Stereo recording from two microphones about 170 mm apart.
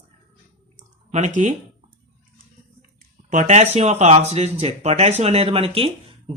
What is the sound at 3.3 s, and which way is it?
Speech, 45° right (ahead or behind).